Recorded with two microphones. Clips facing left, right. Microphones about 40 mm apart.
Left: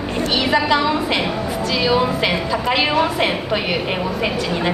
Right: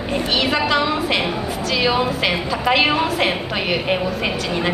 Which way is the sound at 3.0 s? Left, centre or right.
Centre.